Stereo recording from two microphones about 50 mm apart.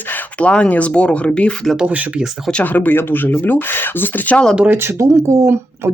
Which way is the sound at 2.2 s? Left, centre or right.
Centre.